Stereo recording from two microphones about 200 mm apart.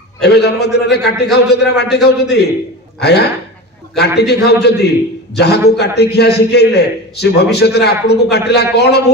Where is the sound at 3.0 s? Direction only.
55° left (ahead or behind).